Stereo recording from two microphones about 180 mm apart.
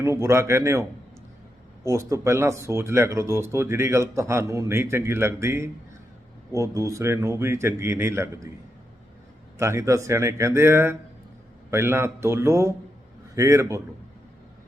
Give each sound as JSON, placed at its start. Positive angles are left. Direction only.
{"t": 0.0, "sound": "speech", "side_deg": -15}
{"t": 9.6, "sound": "speech", "side_deg": -15}